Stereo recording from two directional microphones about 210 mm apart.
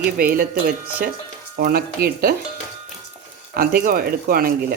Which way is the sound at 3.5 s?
45° right (ahead or behind).